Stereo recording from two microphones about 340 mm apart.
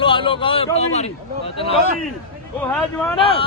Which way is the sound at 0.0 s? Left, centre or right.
Centre.